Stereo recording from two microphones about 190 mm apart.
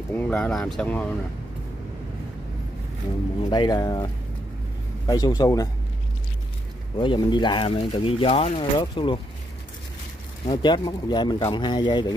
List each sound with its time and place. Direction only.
0.1 s speech: 10° left (ahead or behind)
3.3 s speech: 25° left (ahead or behind)
7.0 s speech: 25° left (ahead or behind)
10.4 s speech: 25° left (ahead or behind)